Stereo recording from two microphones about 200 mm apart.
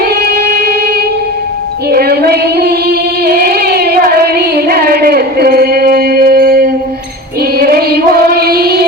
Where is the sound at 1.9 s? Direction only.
50° right (ahead or behind).